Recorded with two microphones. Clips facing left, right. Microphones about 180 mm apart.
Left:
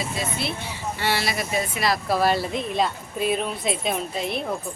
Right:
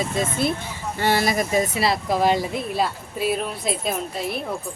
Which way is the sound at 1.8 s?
20° right (ahead or behind).